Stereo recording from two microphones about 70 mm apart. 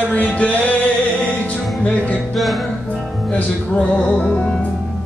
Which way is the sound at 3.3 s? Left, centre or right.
Centre.